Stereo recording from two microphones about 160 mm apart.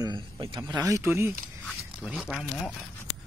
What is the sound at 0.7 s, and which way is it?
Speech, 20° right (ahead or behind).